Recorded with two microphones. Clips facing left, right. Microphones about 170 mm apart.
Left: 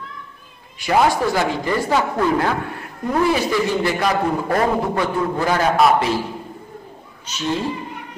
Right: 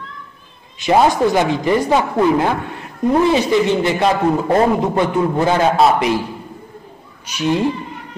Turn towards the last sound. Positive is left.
turn(degrees=-15)  # may be behind; listen again after turning